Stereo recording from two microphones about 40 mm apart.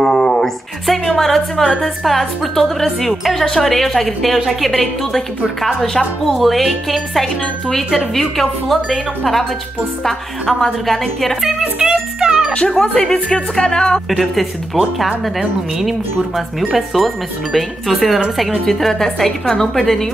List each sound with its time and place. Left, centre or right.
0.0 s a sound: centre
1.0 s a woman's voice: centre
10.6 s a woman's voice: centre
11.8 s music: centre
12.6 s speech: centre
14.3 s a woman's voice: centre